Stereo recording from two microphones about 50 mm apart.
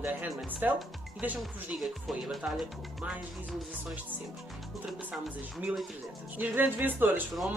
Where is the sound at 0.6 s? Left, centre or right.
Right.